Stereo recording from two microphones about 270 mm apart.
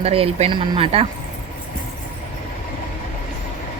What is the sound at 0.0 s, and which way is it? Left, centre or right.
Speech, right.